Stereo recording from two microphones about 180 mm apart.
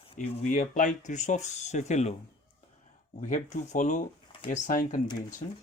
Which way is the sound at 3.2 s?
45° left (ahead or behind).